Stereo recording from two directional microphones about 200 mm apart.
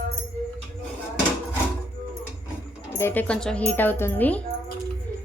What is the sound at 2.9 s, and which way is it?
A woman's voice, 10° left (ahead or behind).